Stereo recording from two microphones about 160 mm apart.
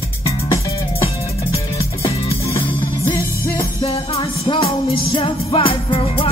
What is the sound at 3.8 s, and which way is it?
Music, 35° left (ahead or behind).